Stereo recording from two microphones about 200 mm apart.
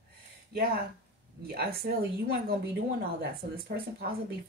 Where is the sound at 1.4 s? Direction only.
50° right (ahead or behind).